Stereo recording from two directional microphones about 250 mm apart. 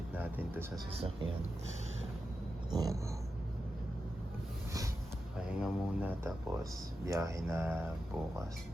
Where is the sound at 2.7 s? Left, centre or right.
Centre.